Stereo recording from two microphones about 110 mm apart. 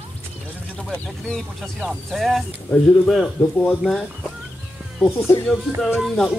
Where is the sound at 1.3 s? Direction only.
Centre (ahead or behind).